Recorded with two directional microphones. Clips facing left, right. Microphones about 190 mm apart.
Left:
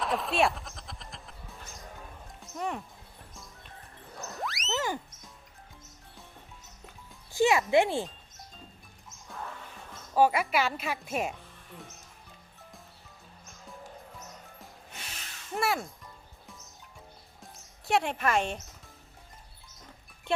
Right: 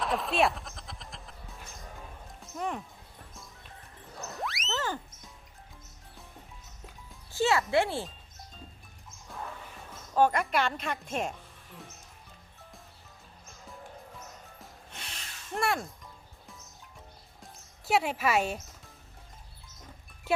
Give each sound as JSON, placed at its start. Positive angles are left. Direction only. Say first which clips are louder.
{"t": 0.0, "sound": "music", "louder": "even", "side_deg": 0}
{"t": 4.4, "sound": "a sound", "louder": "even", "side_deg": 0}
{"t": 4.7, "sound": "music", "louder": "left 2 dB", "side_deg": 15}
{"t": 7.3, "sound": "speech", "louder": "left 3 dB", "side_deg": 15}
{"t": 9.9, "sound": "speech", "louder": "left 1 dB", "side_deg": 5}
{"t": 15.5, "sound": "speech", "louder": "even", "side_deg": 0}
{"t": 17.4, "sound": "music", "louder": "right 1 dB", "side_deg": -5}
{"t": 20.3, "sound": "music", "louder": "right 1 dB", "side_deg": -5}